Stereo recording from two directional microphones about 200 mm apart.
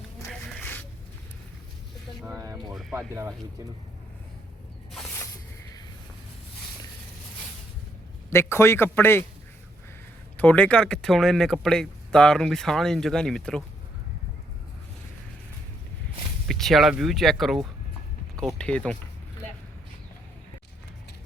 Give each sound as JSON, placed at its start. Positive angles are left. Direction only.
{"t": 0.3, "sound": "a sound", "side_deg": 5}
{"t": 2.2, "sound": "speech", "side_deg": -15}
{"t": 2.6, "sound": "speech", "side_deg": 0}
{"t": 3.2, "sound": "speech", "side_deg": -15}
{"t": 8.3, "sound": "a man's voice", "side_deg": 10}
{"t": 10.3, "sound": "speech", "side_deg": 5}
{"t": 16.5, "sound": "speech", "side_deg": 0}